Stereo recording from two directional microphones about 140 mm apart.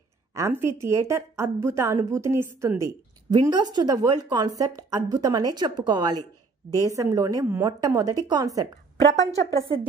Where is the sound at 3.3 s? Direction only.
30° right (ahead or behind).